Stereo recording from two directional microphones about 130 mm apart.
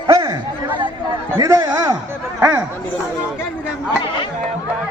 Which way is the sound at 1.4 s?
25° right (ahead or behind).